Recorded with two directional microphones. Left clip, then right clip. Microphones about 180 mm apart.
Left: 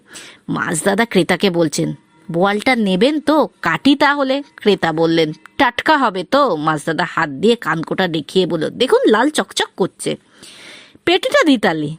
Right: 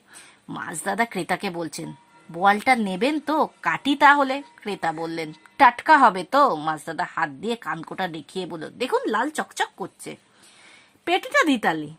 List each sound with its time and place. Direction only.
0.6 s a woman's voice: 30° left (ahead or behind)